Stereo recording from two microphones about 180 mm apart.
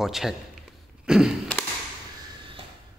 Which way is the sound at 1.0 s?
5° right (ahead or behind).